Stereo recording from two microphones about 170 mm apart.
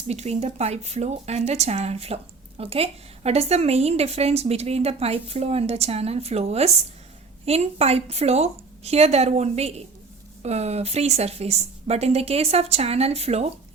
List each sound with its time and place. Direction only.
0.1 s a woman's voice: 40° right (ahead or behind)